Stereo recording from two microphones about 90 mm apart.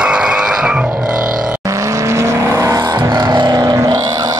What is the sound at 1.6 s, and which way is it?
Vehicle, 35° right (ahead or behind).